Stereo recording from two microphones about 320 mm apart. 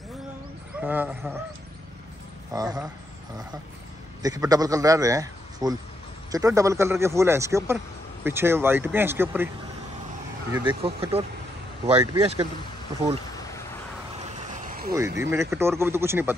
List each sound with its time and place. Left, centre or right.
0.7 s a man's voice: centre
2.5 s speech: centre
4.2 s a man's voice: centre
10.5 s speech: centre
14.3 s vehicle: right
15.0 s speech: centre